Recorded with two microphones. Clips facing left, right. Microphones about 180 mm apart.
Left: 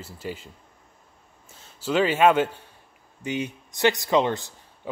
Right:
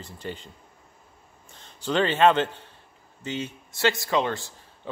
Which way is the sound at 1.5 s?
5° left (ahead or behind).